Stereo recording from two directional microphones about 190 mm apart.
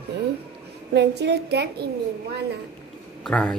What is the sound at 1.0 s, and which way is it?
Speech, 60° right (ahead or behind).